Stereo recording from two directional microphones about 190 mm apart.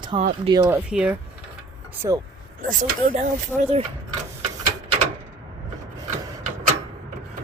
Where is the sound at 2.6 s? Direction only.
45° right (ahead or behind).